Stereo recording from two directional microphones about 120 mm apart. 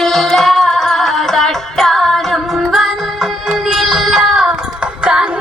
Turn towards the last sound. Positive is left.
turn(degrees=-10)  # may be behind; listen again after turning